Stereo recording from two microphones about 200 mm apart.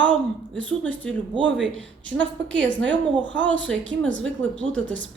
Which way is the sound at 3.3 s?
65° right (ahead or behind).